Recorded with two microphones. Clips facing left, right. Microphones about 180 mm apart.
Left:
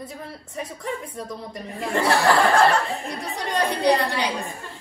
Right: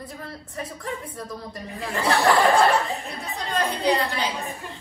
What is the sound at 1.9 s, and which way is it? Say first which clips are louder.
Speech: left 1 dB; centre (ahead or behind).